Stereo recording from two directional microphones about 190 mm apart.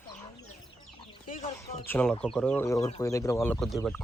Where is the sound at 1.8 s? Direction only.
10° left (ahead or behind).